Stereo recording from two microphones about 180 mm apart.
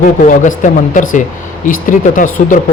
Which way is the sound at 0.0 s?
45° left (ahead or behind).